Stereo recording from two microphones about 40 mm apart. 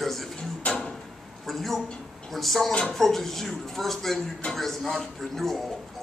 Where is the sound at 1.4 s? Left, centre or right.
Centre.